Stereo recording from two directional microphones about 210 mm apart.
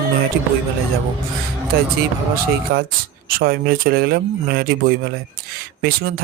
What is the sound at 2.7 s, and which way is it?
Speech, 45° right (ahead or behind).